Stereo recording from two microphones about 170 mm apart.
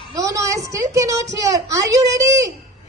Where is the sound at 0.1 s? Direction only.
20° right (ahead or behind).